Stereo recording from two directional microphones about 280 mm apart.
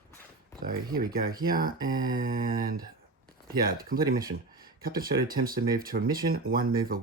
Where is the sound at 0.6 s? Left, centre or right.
Right.